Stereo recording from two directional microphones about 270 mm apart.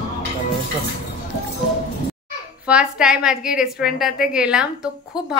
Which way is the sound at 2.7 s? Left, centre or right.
Centre.